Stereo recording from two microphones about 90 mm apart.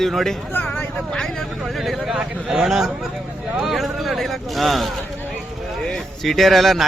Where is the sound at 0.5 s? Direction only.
20° left (ahead or behind).